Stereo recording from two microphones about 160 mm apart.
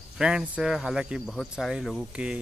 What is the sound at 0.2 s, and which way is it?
Speech, 5° right (ahead or behind).